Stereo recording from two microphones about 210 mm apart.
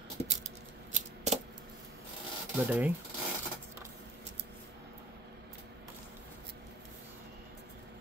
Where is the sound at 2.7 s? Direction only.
5° right (ahead or behind).